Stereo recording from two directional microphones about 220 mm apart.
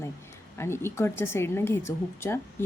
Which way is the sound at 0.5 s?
10° left (ahead or behind).